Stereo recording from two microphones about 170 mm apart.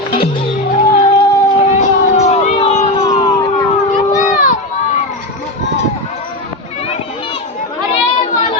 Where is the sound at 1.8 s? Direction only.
40° left (ahead or behind).